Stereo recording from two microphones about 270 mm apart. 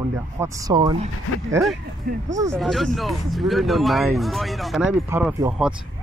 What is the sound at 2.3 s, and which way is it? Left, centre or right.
Speech, centre.